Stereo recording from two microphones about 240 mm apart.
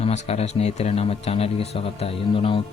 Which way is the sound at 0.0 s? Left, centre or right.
Left.